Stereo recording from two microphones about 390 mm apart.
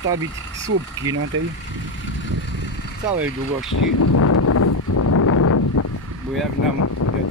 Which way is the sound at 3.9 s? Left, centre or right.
Left.